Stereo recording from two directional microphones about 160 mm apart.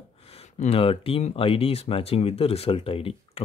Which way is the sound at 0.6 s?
35° left (ahead or behind).